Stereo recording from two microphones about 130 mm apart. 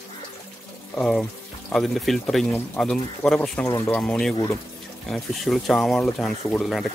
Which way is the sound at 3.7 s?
20° left (ahead or behind).